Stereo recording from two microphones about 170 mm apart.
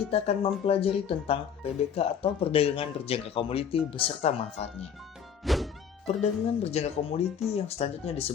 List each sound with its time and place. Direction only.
0.1 s speech: 35° left (ahead or behind)
5.4 s thunk: centre (ahead or behind)
6.6 s speech: 40° left (ahead or behind)